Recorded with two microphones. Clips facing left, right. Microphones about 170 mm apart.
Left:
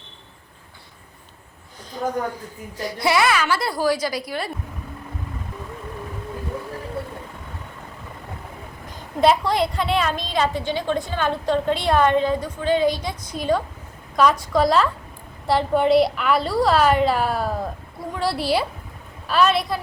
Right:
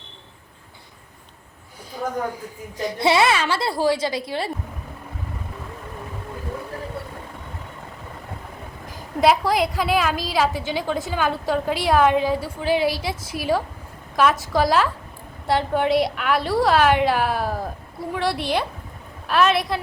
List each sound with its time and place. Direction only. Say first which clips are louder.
2.7 s a woman's voice: right 2 dB; 25° right (ahead or behind)
9.0 s a woman's voice: even; centre (ahead or behind)